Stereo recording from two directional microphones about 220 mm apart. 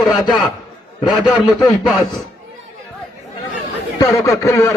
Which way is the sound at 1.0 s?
20° left (ahead or behind).